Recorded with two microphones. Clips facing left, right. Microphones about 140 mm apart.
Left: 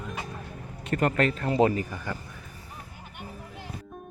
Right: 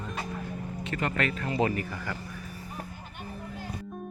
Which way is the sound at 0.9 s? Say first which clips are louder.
Left 6 dB; 45° left (ahead or behind).